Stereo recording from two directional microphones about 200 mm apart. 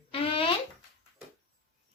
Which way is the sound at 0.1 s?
30° left (ahead or behind).